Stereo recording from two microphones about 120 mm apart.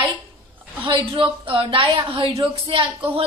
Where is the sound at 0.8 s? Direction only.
45° right (ahead or behind).